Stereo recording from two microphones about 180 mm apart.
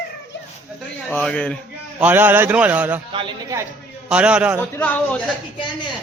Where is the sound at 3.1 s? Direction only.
30° right (ahead or behind).